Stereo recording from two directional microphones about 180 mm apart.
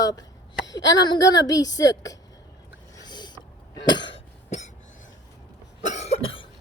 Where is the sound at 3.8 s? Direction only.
25° left (ahead or behind).